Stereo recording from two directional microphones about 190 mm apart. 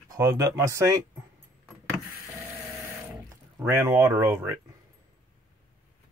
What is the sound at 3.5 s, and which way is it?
Speech, 10° right (ahead or behind).